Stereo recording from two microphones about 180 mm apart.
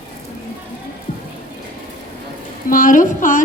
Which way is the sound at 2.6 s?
50° left (ahead or behind).